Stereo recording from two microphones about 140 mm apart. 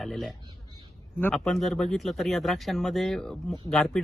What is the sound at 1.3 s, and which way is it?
Speech, centre (ahead or behind).